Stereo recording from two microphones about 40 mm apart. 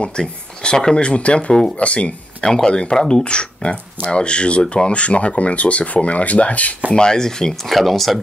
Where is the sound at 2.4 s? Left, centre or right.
Centre; by 6.7 s left.